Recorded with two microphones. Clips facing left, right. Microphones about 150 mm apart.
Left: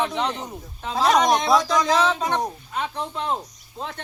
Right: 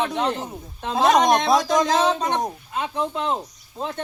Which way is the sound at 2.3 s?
20° right (ahead or behind).